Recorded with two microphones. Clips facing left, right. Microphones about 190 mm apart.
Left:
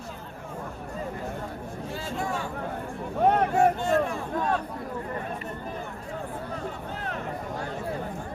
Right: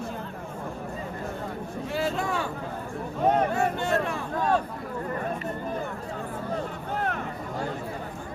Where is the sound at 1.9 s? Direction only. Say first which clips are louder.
Right 4 dB; 75° right (ahead or behind).